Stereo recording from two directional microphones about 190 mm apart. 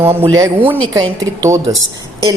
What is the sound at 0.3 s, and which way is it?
A woman's voice, 10° right (ahead or behind).